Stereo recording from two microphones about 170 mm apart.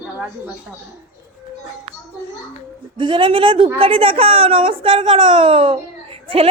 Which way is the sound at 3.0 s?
30° right (ahead or behind).